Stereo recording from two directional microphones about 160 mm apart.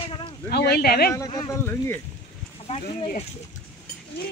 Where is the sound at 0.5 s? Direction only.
75° left (ahead or behind).